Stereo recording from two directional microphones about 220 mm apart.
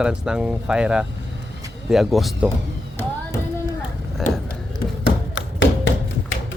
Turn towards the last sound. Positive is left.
turn(degrees=60)  # may be behind; listen again after turning